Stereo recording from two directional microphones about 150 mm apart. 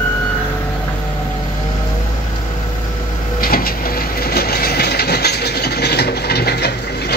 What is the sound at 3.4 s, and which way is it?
Train, 80° left.